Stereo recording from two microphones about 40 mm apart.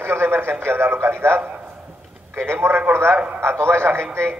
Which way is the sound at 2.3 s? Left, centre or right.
Right.